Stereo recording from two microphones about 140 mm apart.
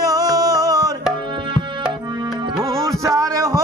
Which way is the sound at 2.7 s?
20° right (ahead or behind).